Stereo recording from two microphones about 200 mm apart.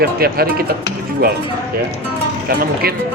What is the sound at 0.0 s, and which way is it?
Speech, 50° right (ahead or behind).